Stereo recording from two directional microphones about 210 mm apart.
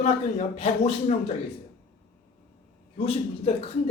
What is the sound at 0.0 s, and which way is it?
Speech, 30° left (ahead or behind).